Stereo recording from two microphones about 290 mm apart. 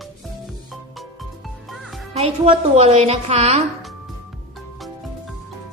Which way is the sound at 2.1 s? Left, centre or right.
Right.